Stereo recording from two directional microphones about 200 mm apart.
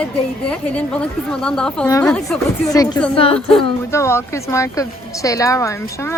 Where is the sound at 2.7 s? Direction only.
20° left (ahead or behind).